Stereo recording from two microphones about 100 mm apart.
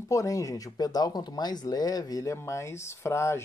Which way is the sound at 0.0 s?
35° left (ahead or behind).